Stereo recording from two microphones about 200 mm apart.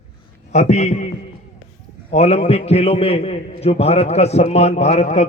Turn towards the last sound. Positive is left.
turn(degrees=35)  # may be behind; listen again after turning